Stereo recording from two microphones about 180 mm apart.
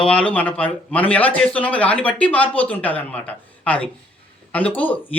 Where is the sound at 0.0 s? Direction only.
5° left (ahead or behind).